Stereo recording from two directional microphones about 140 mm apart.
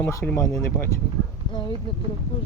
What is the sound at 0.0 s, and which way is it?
Speech, 15° left (ahead or behind).